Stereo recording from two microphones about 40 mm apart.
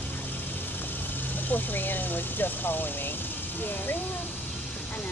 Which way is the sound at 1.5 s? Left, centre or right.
Left.